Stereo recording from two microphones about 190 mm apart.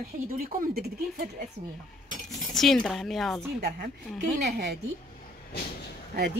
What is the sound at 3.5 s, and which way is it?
Speech, 55° right (ahead or behind).